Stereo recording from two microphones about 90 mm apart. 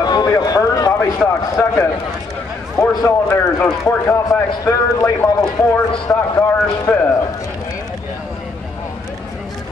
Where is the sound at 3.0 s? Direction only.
30° left (ahead or behind).